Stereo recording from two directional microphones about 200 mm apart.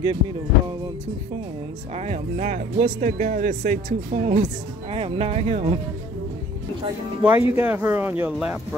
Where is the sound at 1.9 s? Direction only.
35° right (ahead or behind).